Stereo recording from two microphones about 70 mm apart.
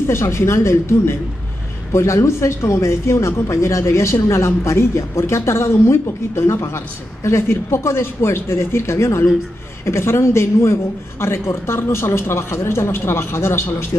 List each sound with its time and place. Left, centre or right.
0.0 s a woman's voice: left